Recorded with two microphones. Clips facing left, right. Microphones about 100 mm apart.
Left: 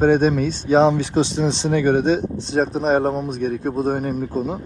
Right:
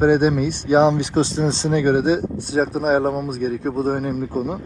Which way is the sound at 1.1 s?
35° right (ahead or behind).